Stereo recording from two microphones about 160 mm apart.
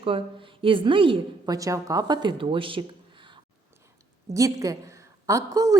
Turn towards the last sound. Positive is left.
turn(degrees=-20)  # may be behind; listen again after turning